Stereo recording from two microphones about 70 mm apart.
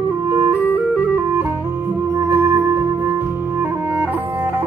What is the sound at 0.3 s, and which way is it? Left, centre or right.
Music, right.